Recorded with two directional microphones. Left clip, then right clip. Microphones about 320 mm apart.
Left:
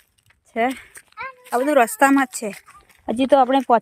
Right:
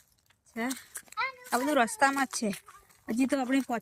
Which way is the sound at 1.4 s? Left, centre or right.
Left.